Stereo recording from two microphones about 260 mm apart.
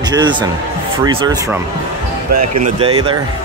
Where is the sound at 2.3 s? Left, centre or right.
Right.